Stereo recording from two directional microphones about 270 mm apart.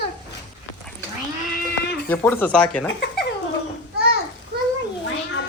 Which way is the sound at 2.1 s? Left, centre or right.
Centre.